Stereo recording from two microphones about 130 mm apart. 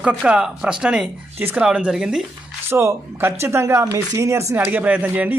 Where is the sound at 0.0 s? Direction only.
10° right (ahead or behind).